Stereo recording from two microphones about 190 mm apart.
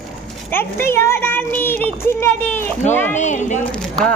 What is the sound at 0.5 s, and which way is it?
Speech, 10° left (ahead or behind).